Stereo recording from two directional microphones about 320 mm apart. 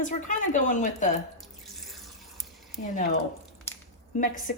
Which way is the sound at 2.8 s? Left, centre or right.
Left.